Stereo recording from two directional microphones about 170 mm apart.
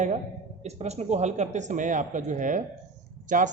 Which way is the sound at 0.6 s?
40° right (ahead or behind).